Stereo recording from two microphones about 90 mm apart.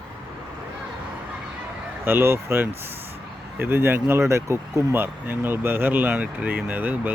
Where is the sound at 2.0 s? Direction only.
25° right (ahead or behind).